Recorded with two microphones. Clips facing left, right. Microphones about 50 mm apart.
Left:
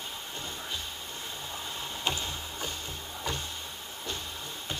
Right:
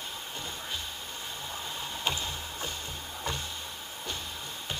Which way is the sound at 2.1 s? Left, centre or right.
Right.